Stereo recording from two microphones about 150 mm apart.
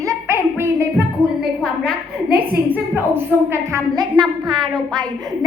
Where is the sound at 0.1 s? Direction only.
15° right (ahead or behind).